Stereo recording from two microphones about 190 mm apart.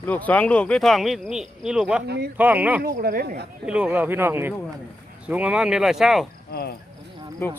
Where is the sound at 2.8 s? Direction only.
50° right (ahead or behind).